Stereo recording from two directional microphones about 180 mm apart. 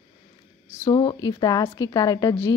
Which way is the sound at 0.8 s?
25° left (ahead or behind).